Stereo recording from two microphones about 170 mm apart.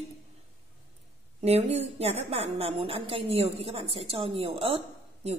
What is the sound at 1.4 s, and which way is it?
A woman's voice, 40° right (ahead or behind).